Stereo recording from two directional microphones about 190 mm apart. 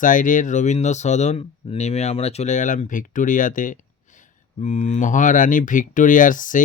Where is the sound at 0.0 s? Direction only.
45° left (ahead or behind).